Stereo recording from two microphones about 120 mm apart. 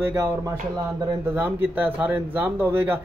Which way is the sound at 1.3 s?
15° right (ahead or behind).